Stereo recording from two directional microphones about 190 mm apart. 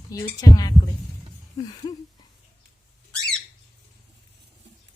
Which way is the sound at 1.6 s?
20° left (ahead or behind).